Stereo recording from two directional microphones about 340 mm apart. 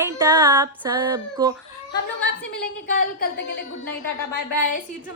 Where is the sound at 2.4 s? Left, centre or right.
Left.